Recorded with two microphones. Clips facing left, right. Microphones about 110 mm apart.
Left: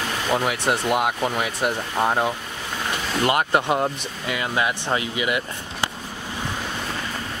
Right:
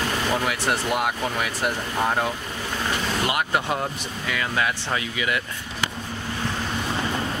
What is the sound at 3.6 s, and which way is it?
Speech, 20° left (ahead or behind).